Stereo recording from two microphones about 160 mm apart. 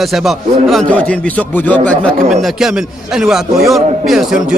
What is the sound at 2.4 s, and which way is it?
A man's voice, 5° right (ahead or behind).